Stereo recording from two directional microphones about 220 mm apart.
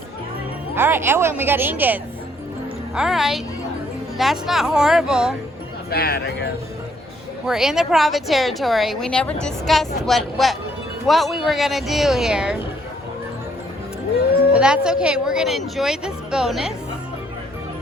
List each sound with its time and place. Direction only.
0.8 s a woman's voice: 10° right (ahead or behind)
5.9 s speech: 45° left (ahead or behind)
7.4 s a woman's voice: centre (ahead or behind)
14.5 s a woman's voice: 5° right (ahead or behind)